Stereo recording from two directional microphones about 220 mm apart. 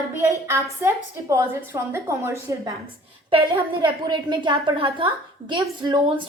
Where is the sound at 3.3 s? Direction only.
25° right (ahead or behind).